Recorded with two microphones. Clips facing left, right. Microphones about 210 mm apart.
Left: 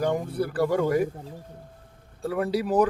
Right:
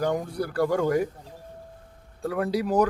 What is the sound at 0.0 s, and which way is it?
Speech, 5° left (ahead or behind).